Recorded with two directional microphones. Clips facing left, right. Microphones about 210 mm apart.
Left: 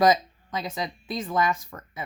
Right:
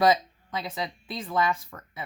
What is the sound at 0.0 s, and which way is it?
Speech, 45° left (ahead or behind).